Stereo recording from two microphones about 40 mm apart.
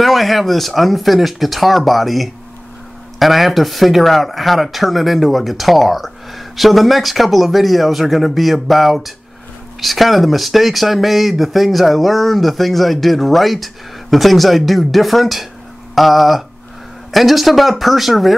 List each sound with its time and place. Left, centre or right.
0.0 s speech: centre